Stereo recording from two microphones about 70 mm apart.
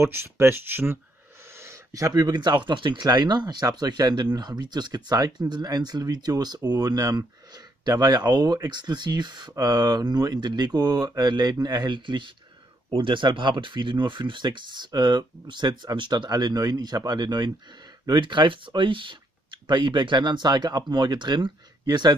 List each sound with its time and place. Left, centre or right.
0.0 s speech: right
1.5 s a sound: right
2.2 s speech: right
9.6 s speech: right
13.5 s speech: right